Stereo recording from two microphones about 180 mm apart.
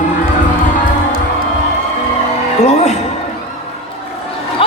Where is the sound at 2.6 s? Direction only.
40° left (ahead or behind).